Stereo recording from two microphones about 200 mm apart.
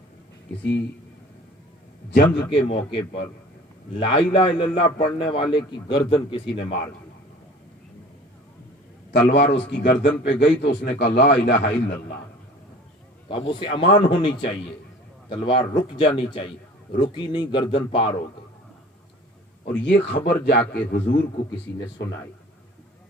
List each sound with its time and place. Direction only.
2.0 s a man's voice: 60° left (ahead or behind)
2.6 s a man's voice: 30° left (ahead or behind)
9.1 s a man's voice: 60° left (ahead or behind)
13.2 s a man's voice: 25° left (ahead or behind)
19.6 s a man's voice: 55° left (ahead or behind)